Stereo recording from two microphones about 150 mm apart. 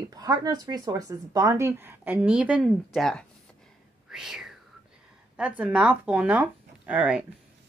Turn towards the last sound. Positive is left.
turn(degrees=-5)  # may be behind; listen again after turning